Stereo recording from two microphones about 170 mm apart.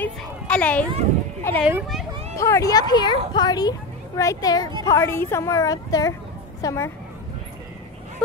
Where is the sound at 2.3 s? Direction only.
15° left (ahead or behind).